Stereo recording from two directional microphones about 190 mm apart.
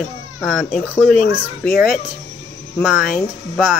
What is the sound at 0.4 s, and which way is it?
Speech, centre (ahead or behind).